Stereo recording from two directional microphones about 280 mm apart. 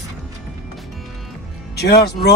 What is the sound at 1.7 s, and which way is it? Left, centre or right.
Speech, left.